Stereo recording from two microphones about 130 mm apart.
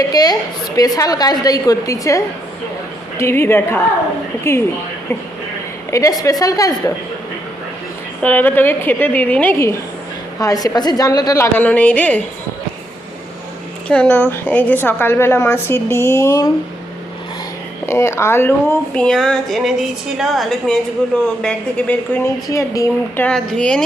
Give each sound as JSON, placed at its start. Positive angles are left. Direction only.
{"t": 0.1, "sound": "a woman's voice", "side_deg": 30}
{"t": 5.9, "sound": "a woman's voice", "side_deg": 25}
{"t": 8.2, "sound": "a woman's voice", "side_deg": 15}
{"t": 11.5, "sound": "a woman's voice", "side_deg": 10}
{"t": 13.8, "sound": "a woman's voice", "side_deg": 10}
{"t": 17.8, "sound": "a woman's voice", "side_deg": 20}
{"t": 18.9, "sound": "a sound", "side_deg": 5}
{"t": 21.4, "sound": "a woman's voice", "side_deg": 10}
{"t": 22.4, "sound": "a woman's voice", "side_deg": 25}
{"t": 23.1, "sound": "a woman's voice", "side_deg": 10}